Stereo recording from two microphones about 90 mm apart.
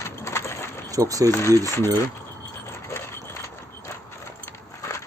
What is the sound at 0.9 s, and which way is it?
Speech, 40° right (ahead or behind).